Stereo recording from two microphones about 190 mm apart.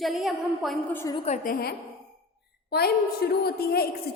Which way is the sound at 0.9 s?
15° left (ahead or behind).